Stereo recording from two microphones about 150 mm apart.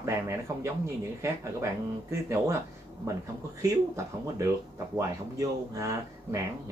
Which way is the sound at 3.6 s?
20° right (ahead or behind).